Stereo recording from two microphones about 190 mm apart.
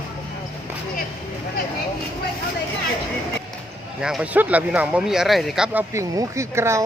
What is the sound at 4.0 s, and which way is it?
Speech, 5° right (ahead or behind).